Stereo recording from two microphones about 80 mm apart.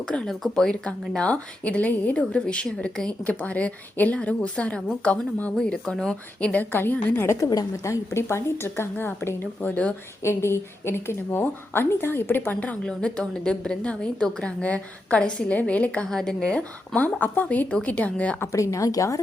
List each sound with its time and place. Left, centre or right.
0.0 s speech: centre
0.3 s speech: centre; by 7.3 s left
7.3 s a woman's voice: left; by 9.9 s centre
10.2 s a woman's voice: left
18.3 s a woman's voice: left